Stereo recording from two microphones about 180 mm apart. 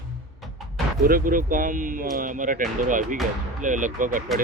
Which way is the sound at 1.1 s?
50° right (ahead or behind).